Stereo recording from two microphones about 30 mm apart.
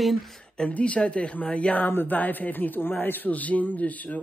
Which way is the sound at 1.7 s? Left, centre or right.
Left.